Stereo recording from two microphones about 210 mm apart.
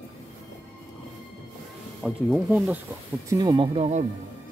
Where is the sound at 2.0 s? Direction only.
5° right (ahead or behind).